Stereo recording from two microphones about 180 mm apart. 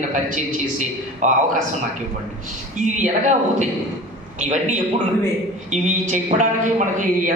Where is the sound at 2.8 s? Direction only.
40° right (ahead or behind).